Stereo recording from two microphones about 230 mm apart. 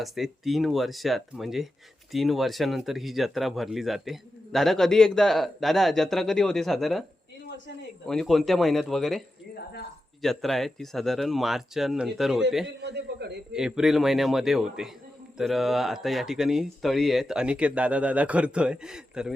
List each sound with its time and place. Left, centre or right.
0.0 s speech: centre
8.0 s speech: centre
12.6 s a man's voice: right
13.5 s speech: centre